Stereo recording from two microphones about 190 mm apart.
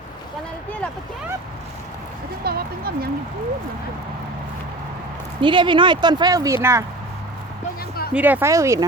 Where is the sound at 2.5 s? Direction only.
55° right (ahead or behind).